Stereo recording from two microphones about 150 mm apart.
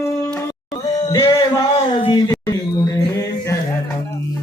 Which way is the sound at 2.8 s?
25° left (ahead or behind).